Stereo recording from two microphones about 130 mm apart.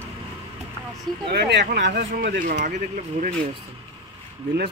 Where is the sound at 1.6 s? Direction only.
90° right; by 3.3 s 65° right (ahead or behind).